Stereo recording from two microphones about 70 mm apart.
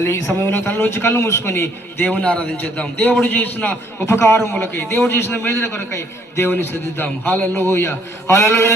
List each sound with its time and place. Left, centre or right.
0.0 s a man's voice: left
2.0 s a man's voice: centre; by 8.7 s left